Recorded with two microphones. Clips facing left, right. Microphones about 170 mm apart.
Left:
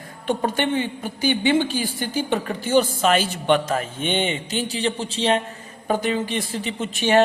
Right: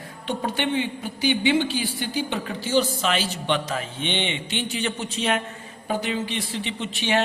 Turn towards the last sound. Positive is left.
turn(degrees=45)  # may be behind; listen again after turning